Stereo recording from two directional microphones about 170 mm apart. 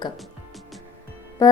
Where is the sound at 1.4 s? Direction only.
20° left (ahead or behind).